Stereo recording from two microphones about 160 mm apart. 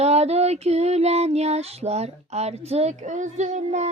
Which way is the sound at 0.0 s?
40° right (ahead or behind).